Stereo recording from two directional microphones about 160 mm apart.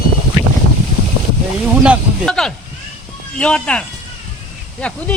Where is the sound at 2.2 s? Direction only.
5° left (ahead or behind).